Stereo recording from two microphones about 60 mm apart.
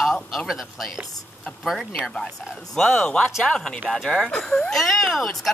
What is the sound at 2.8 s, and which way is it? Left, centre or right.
Speech, centre.